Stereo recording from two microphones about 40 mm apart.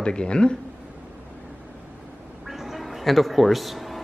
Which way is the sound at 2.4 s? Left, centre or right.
Centre.